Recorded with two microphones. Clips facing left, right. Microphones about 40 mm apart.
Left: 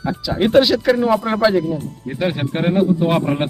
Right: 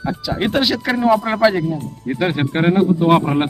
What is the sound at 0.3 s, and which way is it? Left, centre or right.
Speech, centre.